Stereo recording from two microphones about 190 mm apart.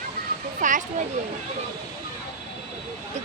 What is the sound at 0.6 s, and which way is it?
Speech, 40° right (ahead or behind).